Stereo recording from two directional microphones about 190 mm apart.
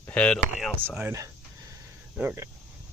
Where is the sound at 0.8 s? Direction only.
10° right (ahead or behind).